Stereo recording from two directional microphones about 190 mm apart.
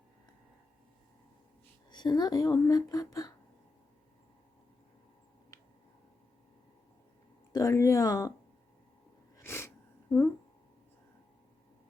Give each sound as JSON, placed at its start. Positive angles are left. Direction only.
{"t": 1.9, "sound": "speech", "side_deg": 20}
{"t": 7.5, "sound": "speech", "side_deg": 15}
{"t": 9.4, "sound": "a sound", "side_deg": 15}